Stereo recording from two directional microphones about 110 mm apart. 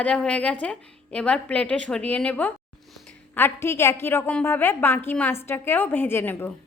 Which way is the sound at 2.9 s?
Centre (ahead or behind).